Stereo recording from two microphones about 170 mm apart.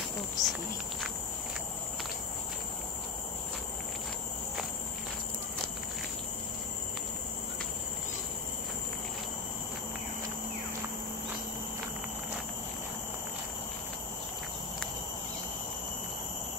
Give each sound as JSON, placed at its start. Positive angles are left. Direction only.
{"t": 0.4, "sound": "speech", "side_deg": 20}